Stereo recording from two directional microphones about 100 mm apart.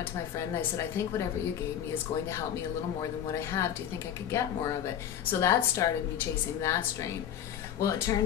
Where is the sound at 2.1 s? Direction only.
90° left.